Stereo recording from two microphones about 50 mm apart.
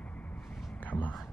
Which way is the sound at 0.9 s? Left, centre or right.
Left.